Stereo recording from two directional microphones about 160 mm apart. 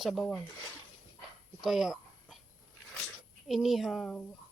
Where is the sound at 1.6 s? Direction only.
5° right (ahead or behind).